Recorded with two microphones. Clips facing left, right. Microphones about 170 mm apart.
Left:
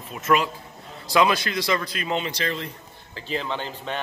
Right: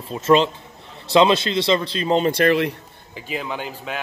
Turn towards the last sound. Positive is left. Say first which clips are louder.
# right 1 dB
turn(degrees=-5)  # may be behind; listen again after turning